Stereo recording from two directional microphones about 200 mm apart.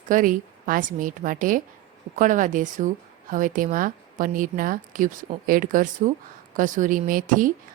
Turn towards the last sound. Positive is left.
turn(degrees=-40)  # may be behind; listen again after turning